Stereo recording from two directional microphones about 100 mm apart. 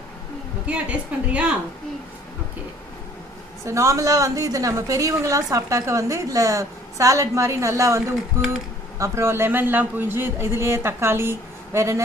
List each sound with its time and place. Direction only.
0.7 s a woman's voice: 10° right (ahead or behind)
3.6 s a woman's voice: 30° right (ahead or behind)